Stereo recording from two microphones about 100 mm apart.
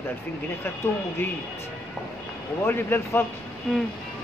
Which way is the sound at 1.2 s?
20° left (ahead or behind).